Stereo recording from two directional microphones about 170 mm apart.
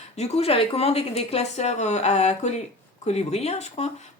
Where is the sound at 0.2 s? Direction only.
40° left (ahead or behind).